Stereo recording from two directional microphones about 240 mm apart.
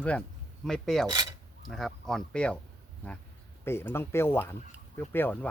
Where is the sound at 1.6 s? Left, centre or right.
Centre.